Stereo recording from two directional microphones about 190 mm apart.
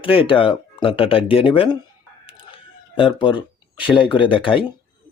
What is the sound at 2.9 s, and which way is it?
Speech, 25° left (ahead or behind).